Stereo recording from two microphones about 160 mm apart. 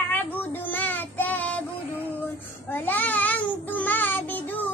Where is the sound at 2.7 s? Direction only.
10° left (ahead or behind).